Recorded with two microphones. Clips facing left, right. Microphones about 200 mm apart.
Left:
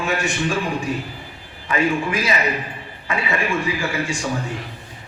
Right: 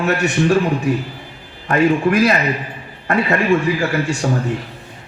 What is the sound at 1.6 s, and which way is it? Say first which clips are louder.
A man's voice: right 6 dB; 60° right (ahead or behind).